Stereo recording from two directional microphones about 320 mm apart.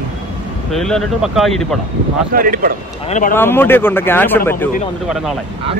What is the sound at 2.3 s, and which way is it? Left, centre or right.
Speech, right.